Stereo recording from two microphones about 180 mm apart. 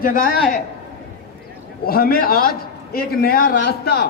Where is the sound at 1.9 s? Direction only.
55° left (ahead or behind).